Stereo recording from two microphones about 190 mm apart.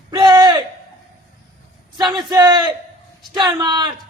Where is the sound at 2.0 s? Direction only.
25° right (ahead or behind).